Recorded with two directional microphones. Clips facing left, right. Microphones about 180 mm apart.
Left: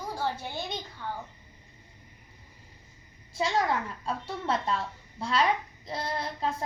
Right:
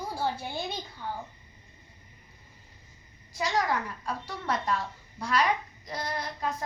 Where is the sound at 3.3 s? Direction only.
25° left (ahead or behind).